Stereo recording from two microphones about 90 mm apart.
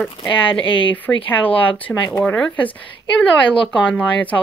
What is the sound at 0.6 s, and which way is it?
Speech, 70° left (ahead or behind).